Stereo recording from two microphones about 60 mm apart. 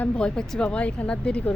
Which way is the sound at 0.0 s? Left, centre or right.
Centre.